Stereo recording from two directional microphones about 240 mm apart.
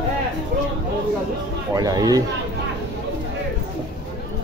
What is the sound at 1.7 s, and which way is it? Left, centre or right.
Speech, centre.